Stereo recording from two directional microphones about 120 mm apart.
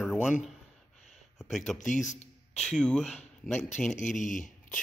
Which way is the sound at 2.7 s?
5° left (ahead or behind).